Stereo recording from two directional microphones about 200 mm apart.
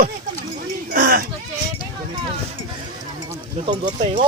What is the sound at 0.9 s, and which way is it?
Sheep, 45° right (ahead or behind).